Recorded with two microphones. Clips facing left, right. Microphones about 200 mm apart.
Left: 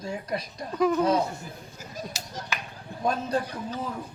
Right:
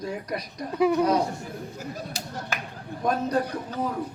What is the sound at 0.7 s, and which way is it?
Speech, 10° right (ahead or behind).